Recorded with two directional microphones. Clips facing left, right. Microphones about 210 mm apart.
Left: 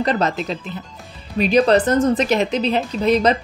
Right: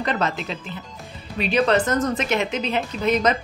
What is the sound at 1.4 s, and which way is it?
Speech, 35° left (ahead or behind).